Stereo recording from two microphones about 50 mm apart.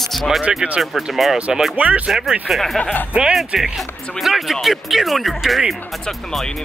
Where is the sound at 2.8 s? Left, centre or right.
Left.